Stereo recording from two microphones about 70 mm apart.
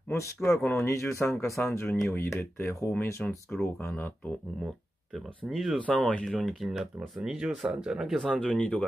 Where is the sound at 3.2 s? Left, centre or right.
Centre.